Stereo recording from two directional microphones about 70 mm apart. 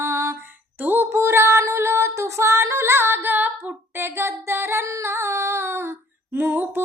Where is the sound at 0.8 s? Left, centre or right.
Right.